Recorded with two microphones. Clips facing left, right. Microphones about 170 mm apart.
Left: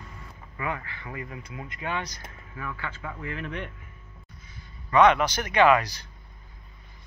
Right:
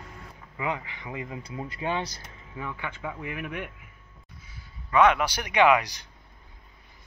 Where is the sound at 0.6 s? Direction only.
15° right (ahead or behind).